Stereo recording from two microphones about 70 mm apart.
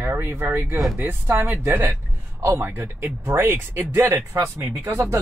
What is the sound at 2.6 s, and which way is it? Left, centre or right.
Speech, right.